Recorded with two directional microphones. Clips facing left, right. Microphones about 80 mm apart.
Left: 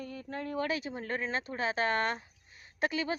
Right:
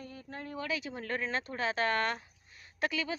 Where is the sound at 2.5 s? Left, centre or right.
Left.